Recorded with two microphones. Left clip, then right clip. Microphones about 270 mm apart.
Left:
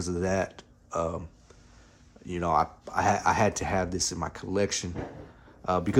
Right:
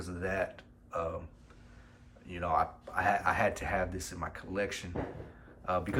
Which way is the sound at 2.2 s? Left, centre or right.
Left.